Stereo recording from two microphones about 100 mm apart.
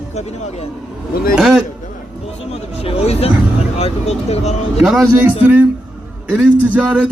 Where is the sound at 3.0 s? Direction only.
90° left.